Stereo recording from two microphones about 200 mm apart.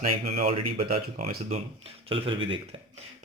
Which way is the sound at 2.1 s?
25° right (ahead or behind).